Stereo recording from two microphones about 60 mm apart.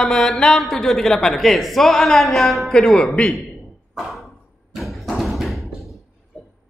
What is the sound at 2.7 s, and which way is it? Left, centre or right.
Speech, centre.